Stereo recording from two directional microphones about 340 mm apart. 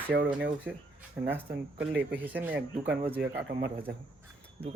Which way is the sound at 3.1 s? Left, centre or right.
Right.